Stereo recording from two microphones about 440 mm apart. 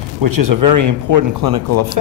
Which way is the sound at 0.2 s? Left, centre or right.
Right.